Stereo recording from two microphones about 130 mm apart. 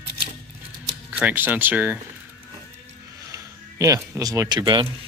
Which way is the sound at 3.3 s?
25° right (ahead or behind).